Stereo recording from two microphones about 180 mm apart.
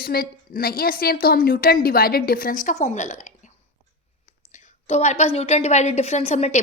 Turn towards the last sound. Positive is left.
turn(degrees=35)  # may be behind; listen again after turning